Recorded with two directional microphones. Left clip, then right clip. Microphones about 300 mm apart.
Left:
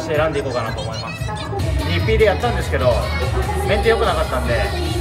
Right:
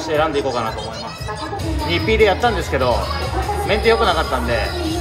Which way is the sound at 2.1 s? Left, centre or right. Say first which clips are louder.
Right 1 dB; centre.